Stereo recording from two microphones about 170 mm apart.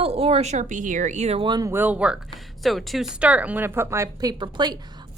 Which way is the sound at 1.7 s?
10° right (ahead or behind).